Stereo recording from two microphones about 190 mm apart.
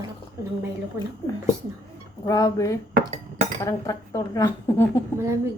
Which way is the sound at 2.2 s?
20° left (ahead or behind).